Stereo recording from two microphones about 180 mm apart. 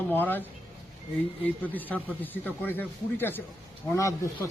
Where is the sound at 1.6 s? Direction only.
10° left (ahead or behind).